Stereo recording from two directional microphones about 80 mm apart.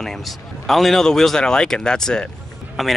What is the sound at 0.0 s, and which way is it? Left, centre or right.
A man's voice, centre.